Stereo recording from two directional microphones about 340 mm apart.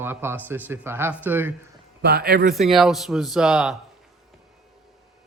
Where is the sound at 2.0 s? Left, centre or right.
Right.